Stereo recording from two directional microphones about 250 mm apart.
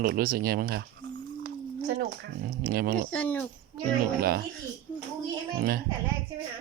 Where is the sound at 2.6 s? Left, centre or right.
Right.